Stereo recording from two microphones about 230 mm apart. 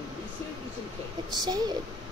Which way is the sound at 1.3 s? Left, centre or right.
Centre.